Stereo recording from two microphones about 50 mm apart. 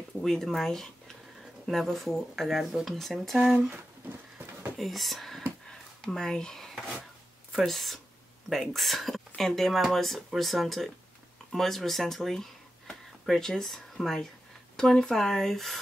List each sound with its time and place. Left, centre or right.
0.2 s speech: centre
3.3 s speech: right
4.7 s speech: centre
5.7 s a sound: centre
7.5 s speech: centre